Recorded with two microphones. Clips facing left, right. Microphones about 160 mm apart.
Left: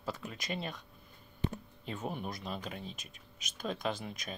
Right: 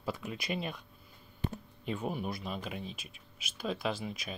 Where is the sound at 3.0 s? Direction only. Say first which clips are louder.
Right 1 dB; 45° left (ahead or behind).